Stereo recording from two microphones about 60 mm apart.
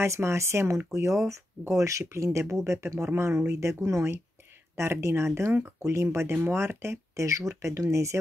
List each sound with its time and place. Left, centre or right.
0.0 s speech: right
7.2 s speech: right